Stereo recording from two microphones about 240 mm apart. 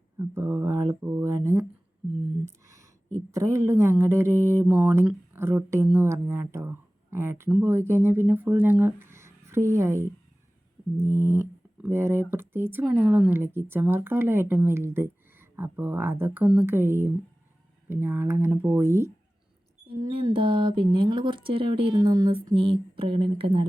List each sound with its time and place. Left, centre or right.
0.2 s speech: centre
2.4 s a sound: centre
3.3 s speech: centre
11.0 s mantra: centre
12.3 s speech: centre